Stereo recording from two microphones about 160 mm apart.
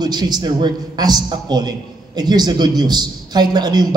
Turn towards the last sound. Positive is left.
turn(degrees=-25)  # may be behind; listen again after turning